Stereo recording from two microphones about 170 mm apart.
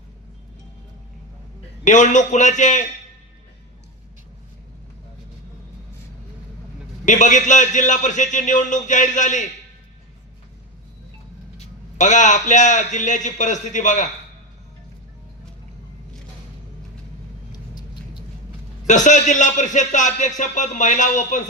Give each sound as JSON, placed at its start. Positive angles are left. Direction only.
{"t": 1.8, "sound": "music", "side_deg": 45}
{"t": 7.0, "sound": "music", "side_deg": 45}
{"t": 11.5, "sound": "music", "side_deg": 45}
{"t": 17.5, "sound": "vehicle", "side_deg": 25}
{"t": 18.9, "sound": "music", "side_deg": 45}